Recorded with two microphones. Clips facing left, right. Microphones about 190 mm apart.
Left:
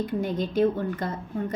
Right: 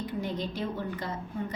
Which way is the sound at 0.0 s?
50° left (ahead or behind).